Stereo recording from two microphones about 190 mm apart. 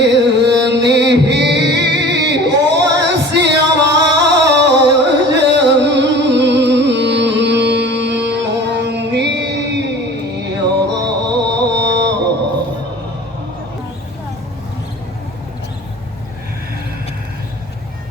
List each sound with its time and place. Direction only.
0.0 s music: 65° right (ahead or behind)
10.9 s music: 65° right (ahead or behind)